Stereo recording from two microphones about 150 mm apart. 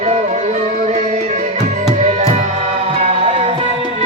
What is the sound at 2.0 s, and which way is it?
Music, 50° right (ahead or behind).